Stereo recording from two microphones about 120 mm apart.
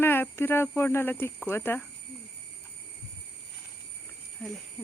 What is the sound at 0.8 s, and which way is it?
Speech, 20° left (ahead or behind).